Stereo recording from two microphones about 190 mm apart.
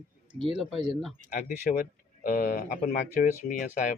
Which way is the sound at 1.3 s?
45° left (ahead or behind).